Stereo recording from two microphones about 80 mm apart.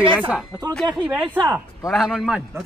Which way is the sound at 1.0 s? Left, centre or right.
Right.